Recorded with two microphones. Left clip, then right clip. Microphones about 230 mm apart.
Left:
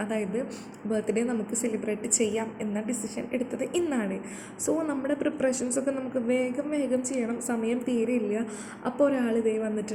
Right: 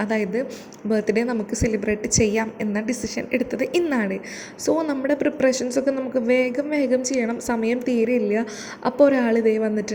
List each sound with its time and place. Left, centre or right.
0.0 s a woman's voice: right
2.0 s a woman's voice: right
2.3 s a woman's voice: right